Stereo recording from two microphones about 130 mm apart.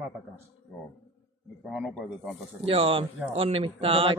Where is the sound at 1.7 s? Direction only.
5° right (ahead or behind).